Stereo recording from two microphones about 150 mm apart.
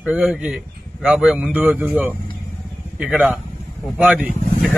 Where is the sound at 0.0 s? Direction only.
5° right (ahead or behind).